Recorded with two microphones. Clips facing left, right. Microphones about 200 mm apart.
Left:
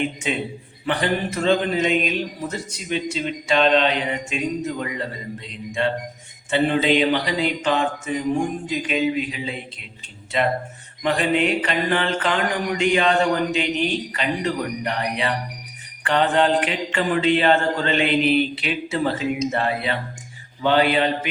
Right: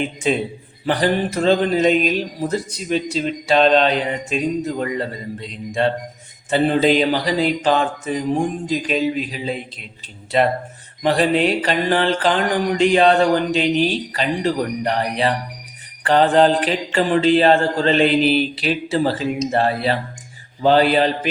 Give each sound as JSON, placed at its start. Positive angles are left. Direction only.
{"t": 0.2, "sound": "speech", "side_deg": -35}